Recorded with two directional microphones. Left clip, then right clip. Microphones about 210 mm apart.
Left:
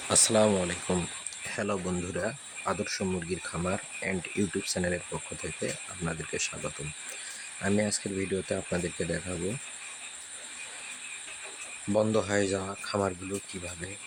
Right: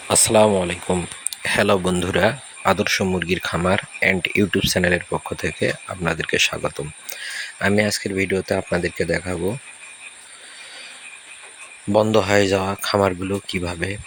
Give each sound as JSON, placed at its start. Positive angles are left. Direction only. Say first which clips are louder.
{"t": 0.1, "sound": "speech", "louder": "right 9 dB", "side_deg": -20}
{"t": 1.3, "sound": "speech", "louder": "right 16 dB", "side_deg": -35}
{"t": 11.9, "sound": "speech", "louder": "right 10 dB", "side_deg": -30}